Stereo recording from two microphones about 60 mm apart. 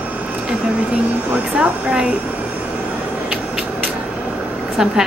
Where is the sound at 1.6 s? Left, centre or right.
Centre.